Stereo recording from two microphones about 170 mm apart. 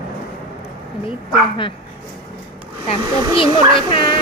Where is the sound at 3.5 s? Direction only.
30° left (ahead or behind).